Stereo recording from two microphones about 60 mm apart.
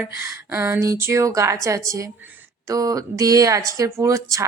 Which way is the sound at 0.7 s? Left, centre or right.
Right.